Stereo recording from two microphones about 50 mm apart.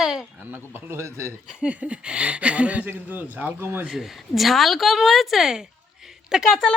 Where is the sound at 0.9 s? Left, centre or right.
Right.